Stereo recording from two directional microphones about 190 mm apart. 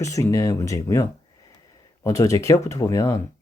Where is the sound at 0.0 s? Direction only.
15° left (ahead or behind).